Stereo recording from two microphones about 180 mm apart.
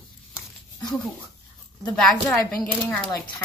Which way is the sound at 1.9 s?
5° left (ahead or behind).